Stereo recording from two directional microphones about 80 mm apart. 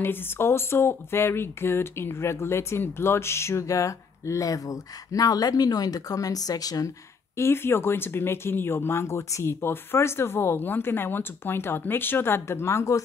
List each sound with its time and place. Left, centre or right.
0.0 s speech: left
7.3 s speech: left